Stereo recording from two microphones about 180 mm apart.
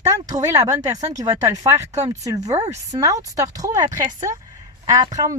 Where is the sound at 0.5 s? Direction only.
20° right (ahead or behind).